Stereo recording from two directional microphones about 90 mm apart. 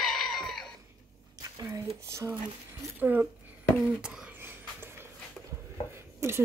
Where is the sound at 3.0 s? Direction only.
20° right (ahead or behind).